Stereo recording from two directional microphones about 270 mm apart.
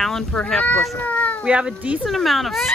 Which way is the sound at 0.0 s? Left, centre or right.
Centre.